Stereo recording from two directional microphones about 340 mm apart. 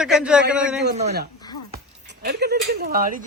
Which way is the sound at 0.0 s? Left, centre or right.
Centre.